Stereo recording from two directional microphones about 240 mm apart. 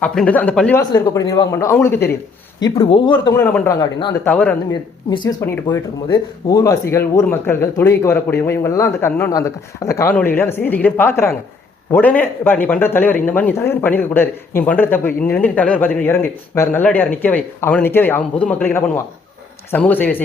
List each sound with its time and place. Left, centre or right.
0.0 s a man's voice: centre
4.7 s a man's voice: centre